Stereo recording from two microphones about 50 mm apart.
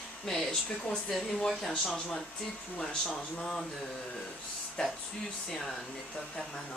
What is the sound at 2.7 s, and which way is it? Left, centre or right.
Speech, centre.